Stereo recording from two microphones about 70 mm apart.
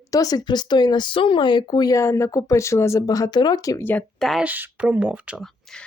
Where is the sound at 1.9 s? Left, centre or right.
Left.